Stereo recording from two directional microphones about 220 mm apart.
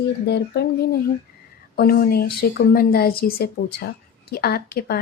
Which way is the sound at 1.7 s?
45° left (ahead or behind).